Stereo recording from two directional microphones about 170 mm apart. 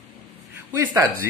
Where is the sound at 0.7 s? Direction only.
15° right (ahead or behind).